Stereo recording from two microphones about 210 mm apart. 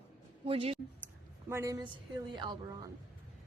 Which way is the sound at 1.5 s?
15° right (ahead or behind).